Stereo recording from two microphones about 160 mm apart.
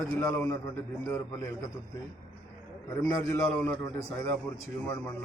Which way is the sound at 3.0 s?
10° left (ahead or behind).